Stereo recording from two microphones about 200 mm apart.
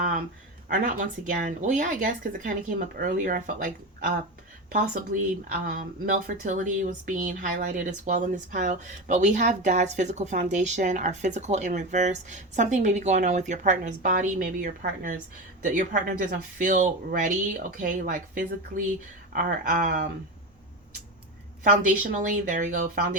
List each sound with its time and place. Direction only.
0.7 s speech: 40° right (ahead or behind)
5.5 s speech: 45° right (ahead or behind)
21.6 s speech: 40° right (ahead or behind)